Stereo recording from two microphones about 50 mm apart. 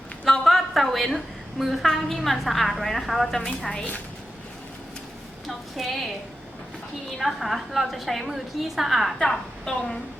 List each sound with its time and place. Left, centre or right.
0.3 s a woman's voice: centre
3.7 s a woman's voice: left
5.5 s a sound: centre
7.2 s a woman's voice: centre
9.1 s a woman's voice: centre